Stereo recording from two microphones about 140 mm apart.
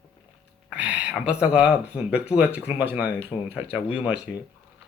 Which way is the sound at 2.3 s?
10° right (ahead or behind).